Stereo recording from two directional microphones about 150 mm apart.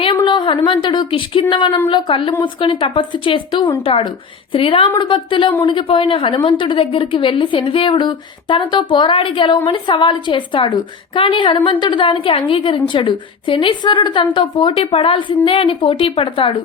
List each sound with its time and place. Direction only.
0.0 s a woman's voice: 35° left (ahead or behind)